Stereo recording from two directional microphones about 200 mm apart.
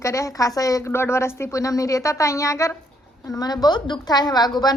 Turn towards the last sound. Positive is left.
turn(degrees=20)  # may be behind; listen again after turning